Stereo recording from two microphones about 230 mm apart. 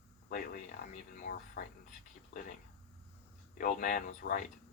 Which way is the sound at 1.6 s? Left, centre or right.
Left.